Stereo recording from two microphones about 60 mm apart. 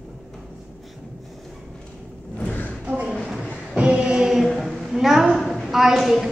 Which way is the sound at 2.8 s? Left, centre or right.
Right.